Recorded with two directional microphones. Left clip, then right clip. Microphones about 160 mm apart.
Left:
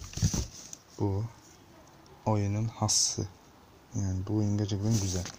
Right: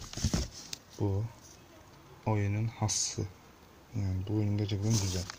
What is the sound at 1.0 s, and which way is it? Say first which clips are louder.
Speech: left 2 dB; 50° left (ahead or behind).